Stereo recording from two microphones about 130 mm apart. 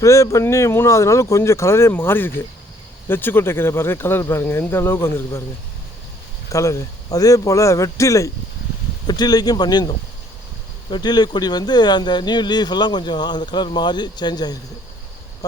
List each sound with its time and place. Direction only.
0.0 s speech: 25° left (ahead or behind)
6.5 s speech: 25° left (ahead or behind)